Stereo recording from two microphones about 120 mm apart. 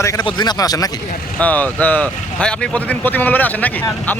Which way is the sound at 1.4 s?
15° left (ahead or behind).